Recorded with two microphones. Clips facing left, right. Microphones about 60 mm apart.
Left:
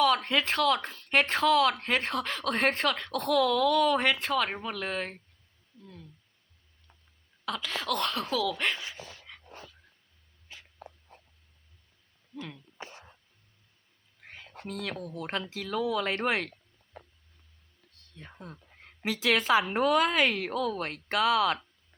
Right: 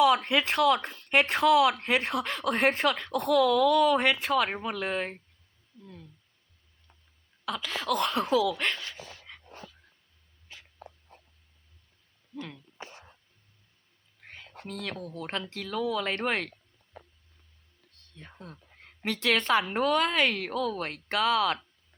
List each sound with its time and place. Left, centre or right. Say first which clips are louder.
0.0 s speech: right 2 dB; centre
7.4 s speech: right 1 dB; centre
8.1 s speech: right 5 dB; centre
8.5 s speech: even; centre
9.3 s dog: right 1 dB; centre
14.2 s speech: even; centre
17.9 s a woman's voice: even; centre